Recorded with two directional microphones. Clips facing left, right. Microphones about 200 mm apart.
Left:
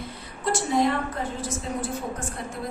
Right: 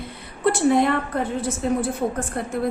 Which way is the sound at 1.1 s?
65° right (ahead or behind).